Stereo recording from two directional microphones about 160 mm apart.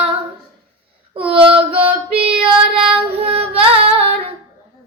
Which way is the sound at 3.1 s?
40° right (ahead or behind).